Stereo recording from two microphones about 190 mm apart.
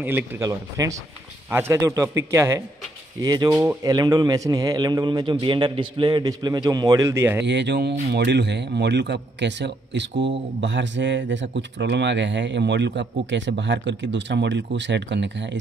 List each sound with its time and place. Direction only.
0.0 s a man's voice: 10° right (ahead or behind)
7.4 s speech: 65° right (ahead or behind)